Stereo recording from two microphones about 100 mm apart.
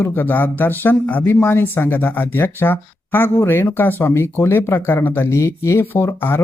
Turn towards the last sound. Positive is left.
turn(degrees=25)  # may be behind; listen again after turning